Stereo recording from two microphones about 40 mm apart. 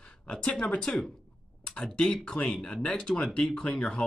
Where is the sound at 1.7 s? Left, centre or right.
Left.